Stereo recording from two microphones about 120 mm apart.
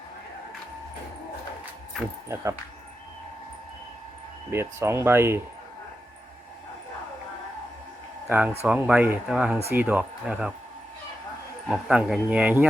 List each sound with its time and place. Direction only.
2.3 s speech: 25° right (ahead or behind)
4.5 s speech: 20° right (ahead or behind)
8.3 s speech: 15° right (ahead or behind)
11.7 s speech: 5° right (ahead or behind)